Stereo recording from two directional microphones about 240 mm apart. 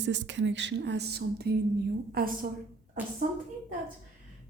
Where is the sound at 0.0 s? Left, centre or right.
Right.